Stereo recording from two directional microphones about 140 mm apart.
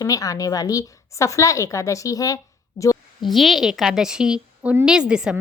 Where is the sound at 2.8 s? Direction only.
25° left (ahead or behind).